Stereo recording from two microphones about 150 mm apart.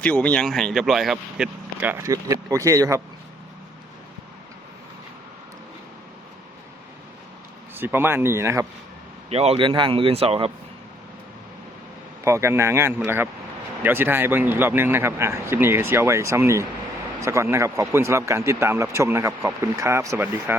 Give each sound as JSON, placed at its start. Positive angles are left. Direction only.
{"t": 0.0, "sound": "speech", "side_deg": 10}
{"t": 7.8, "sound": "speech", "side_deg": -15}
{"t": 9.3, "sound": "speech", "side_deg": -40}
{"t": 12.2, "sound": "speech", "side_deg": -20}